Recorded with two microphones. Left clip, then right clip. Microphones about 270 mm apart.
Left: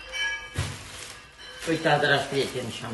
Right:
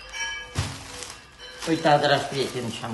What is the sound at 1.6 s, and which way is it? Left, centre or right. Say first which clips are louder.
A man's voice: right 3 dB; right.